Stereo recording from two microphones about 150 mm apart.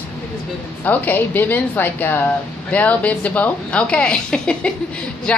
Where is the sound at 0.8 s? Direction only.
10° left (ahead or behind).